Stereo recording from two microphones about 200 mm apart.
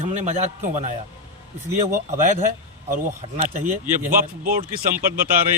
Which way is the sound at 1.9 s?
40° right (ahead or behind).